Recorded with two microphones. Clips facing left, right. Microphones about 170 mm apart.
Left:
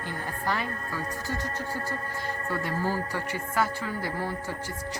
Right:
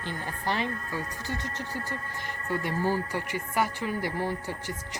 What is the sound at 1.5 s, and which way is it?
Speech, 40° left (ahead or behind).